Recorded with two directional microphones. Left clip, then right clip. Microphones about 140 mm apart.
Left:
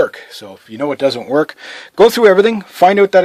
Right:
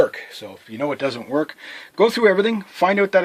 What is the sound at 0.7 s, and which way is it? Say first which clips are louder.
Speech: left 7 dB; 65° left (ahead or behind).